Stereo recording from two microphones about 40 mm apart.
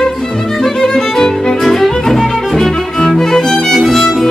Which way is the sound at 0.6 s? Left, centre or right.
Centre.